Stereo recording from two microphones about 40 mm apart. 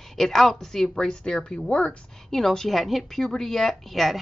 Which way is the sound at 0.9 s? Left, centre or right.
Left.